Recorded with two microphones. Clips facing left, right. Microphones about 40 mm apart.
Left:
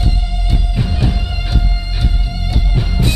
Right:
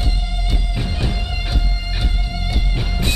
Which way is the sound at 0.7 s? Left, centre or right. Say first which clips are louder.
Left 6 dB; centre.